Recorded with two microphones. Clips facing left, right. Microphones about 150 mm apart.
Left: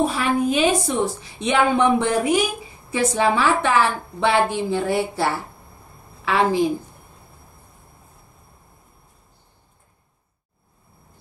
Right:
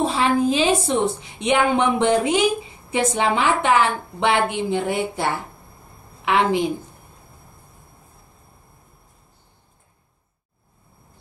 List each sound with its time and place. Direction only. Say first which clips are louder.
0.0 s a woman's voice: right 1 dB; 25° right (ahead or behind)